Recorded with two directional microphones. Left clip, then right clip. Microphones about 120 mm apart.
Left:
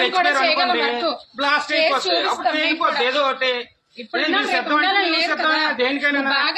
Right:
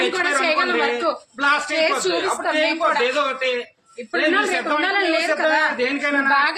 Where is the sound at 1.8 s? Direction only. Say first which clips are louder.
Left 1 dB; 55° right (ahead or behind).